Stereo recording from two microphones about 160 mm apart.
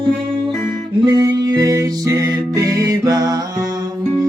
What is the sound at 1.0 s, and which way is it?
Music, 20° right (ahead or behind).